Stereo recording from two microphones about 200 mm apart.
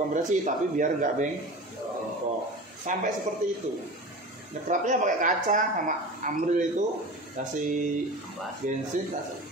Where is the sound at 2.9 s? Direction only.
40° right (ahead or behind).